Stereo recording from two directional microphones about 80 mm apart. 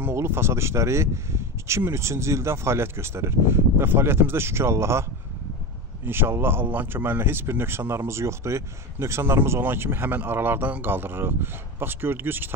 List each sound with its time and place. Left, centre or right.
0.1 s speech: right
6.0 s speech: right